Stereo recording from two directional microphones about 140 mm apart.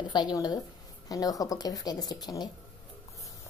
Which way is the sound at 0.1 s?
30° left (ahead or behind).